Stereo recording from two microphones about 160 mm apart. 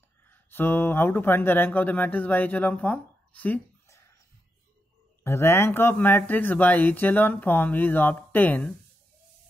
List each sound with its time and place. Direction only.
0.3 s speech: 15° left (ahead or behind)
5.2 s speech: 15° left (ahead or behind)